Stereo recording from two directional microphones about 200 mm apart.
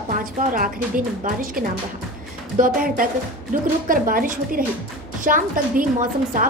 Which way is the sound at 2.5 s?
40° right (ahead or behind).